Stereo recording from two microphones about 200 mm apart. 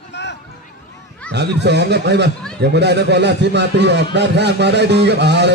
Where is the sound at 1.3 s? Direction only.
60° right (ahead or behind).